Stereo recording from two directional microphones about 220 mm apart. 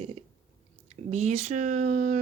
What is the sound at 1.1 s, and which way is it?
Speech, 30° right (ahead or behind).